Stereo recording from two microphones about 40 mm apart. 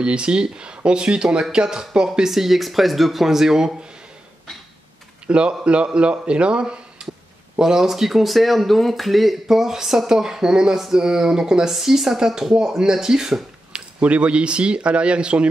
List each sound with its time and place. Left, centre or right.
0.0 s speech: right
5.2 s speech: right
13.7 s speech: right